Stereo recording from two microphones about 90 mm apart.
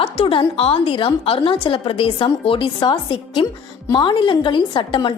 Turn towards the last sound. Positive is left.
turn(degrees=65)  # may be behind; listen again after turning